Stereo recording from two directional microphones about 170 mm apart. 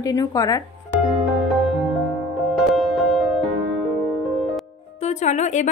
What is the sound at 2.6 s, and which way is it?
Music, centre (ahead or behind).